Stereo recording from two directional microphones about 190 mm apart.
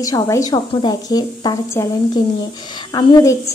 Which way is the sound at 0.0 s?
20° left (ahead or behind).